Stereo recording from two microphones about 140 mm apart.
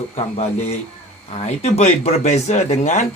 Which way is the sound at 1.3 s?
50° left (ahead or behind).